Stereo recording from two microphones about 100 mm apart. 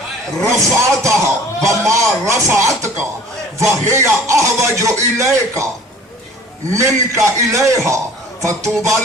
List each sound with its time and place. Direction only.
0.4 s a man's voice: 30° right (ahead or behind)
6.7 s speech: 30° right (ahead or behind)